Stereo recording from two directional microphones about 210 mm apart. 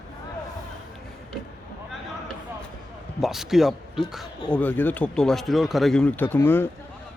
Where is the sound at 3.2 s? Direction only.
Centre (ahead or behind).